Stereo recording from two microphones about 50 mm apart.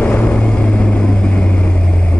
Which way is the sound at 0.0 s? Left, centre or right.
Left.